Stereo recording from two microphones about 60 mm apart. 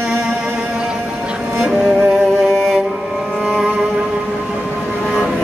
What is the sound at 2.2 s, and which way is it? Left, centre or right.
Music, centre.